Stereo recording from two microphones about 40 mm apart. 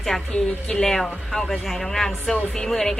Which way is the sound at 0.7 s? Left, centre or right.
Centre.